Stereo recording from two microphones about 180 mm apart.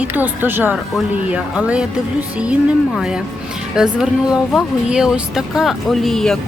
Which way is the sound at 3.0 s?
5° right (ahead or behind).